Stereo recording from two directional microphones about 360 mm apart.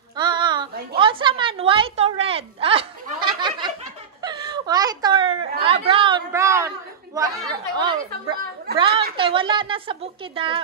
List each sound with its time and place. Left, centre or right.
0.1 s a sound: centre
4.2 s whimper: centre
5.6 s chatter: centre
7.2 s a woman's voice: centre